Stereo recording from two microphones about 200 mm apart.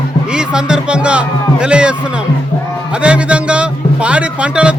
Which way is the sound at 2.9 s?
5° right (ahead or behind).